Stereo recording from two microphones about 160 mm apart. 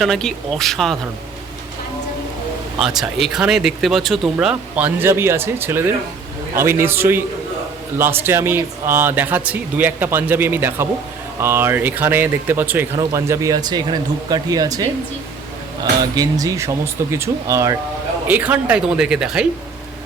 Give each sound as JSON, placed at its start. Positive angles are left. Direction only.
{"t": 0.0, "sound": "speech", "side_deg": 0}
{"t": 2.7, "sound": "speech", "side_deg": 0}